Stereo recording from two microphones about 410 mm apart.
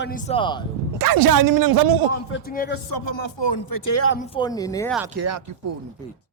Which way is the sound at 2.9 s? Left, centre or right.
Left.